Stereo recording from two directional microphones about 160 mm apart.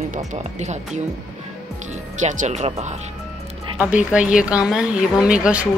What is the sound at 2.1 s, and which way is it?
Speech, 45° right (ahead or behind).